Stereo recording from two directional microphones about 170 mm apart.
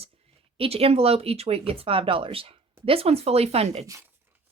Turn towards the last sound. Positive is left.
turn(degrees=-40)  # may be behind; listen again after turning